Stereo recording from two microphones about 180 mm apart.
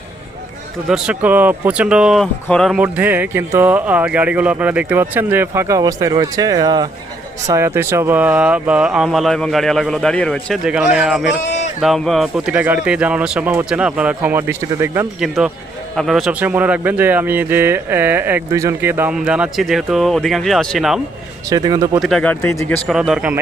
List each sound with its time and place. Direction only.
0.9 s speech: 5° right (ahead or behind)
21.5 s speech: 20° right (ahead or behind)
22.0 s speech: 5° left (ahead or behind)
22.4 s speech: 15° left (ahead or behind)
22.9 s speech: centre (ahead or behind)